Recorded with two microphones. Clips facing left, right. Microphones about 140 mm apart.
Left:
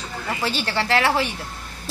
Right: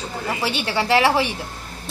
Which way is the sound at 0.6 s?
15° right (ahead or behind).